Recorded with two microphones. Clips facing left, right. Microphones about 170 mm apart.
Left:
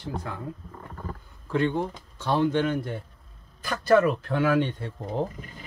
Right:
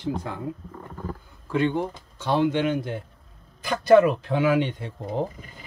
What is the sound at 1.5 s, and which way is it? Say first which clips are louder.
Speech: right 1 dB; 10° right (ahead or behind).